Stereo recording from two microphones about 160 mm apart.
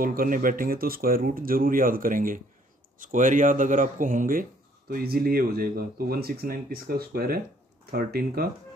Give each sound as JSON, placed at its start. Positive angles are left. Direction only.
{"t": 0.0, "sound": "speech", "side_deg": -65}